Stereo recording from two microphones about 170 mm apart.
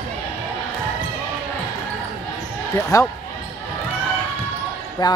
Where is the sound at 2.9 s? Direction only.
20° left (ahead or behind).